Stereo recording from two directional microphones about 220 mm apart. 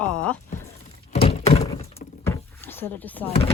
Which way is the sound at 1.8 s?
30° left (ahead or behind).